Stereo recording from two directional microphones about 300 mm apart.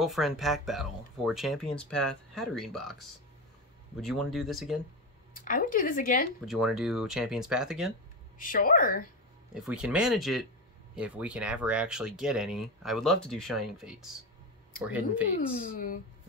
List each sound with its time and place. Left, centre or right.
0.0 s speech: centre
5.3 s speech: left
6.4 s speech: centre
8.4 s speech: left
9.5 s speech: centre